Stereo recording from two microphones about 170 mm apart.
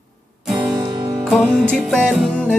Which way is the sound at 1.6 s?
5° right (ahead or behind).